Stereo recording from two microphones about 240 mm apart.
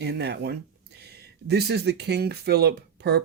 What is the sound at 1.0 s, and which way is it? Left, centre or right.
Speech, right.